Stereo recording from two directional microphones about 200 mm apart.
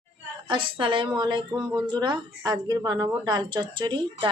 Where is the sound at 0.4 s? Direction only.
25° right (ahead or behind).